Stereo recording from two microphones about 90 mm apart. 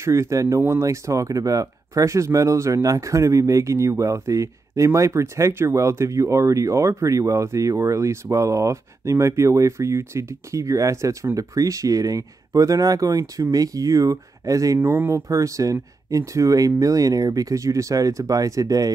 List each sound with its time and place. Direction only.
0.0 s speech: 35° right (ahead or behind)
14.8 s speech: 25° right (ahead or behind)